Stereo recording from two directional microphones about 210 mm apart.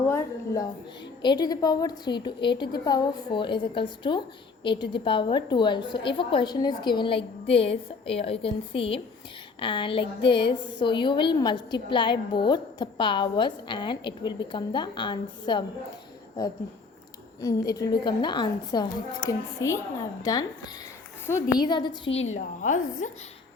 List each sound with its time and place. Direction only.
0.1 s a woman's voice: 15° left (ahead or behind)
17.4 s a woman's voice: 15° left (ahead or behind)
21.6 s a woman's voice: 20° left (ahead or behind)
22.3 s a woman's voice: 35° left (ahead or behind)